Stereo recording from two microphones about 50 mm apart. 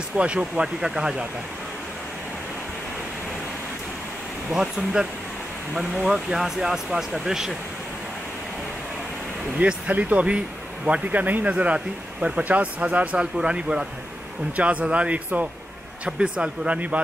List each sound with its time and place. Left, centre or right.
0.2 s speech: right
4.5 s speech: centre
6.0 s speech: centre
9.6 s speech: right
16.1 s speech: centre